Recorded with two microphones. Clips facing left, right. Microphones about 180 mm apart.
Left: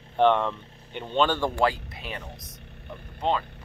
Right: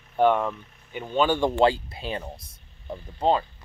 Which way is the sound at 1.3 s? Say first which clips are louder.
Right 4 dB; 20° right (ahead or behind).